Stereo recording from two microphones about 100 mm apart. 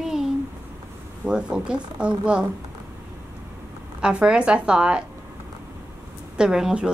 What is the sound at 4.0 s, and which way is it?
A woman's voice, 10° right (ahead or behind).